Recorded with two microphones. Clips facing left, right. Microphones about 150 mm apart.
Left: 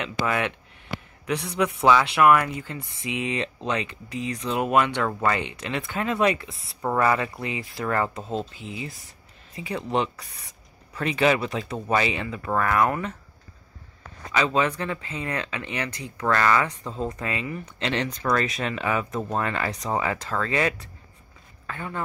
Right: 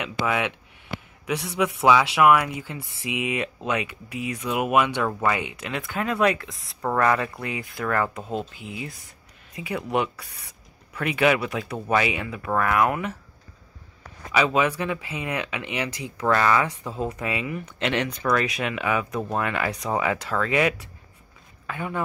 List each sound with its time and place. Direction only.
0.0 s speech: 5° right (ahead or behind)
8.1 s speech: 5° right (ahead or behind)
11.1 s speech: 10° right (ahead or behind)
14.3 s speech: 10° right (ahead or behind)